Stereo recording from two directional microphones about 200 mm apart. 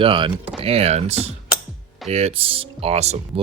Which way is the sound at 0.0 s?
25° right (ahead or behind).